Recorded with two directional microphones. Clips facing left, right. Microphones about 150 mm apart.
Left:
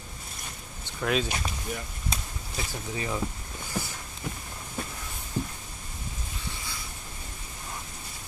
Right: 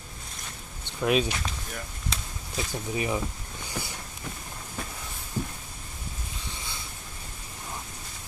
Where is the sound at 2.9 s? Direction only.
15° right (ahead or behind).